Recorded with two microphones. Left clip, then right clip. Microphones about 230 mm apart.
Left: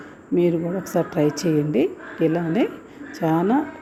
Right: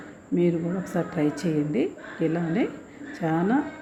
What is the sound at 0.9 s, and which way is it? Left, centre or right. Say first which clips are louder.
A woman's voice: left 6 dB; centre.